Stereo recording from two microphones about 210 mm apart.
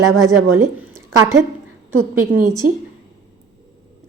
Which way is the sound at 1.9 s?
90° right.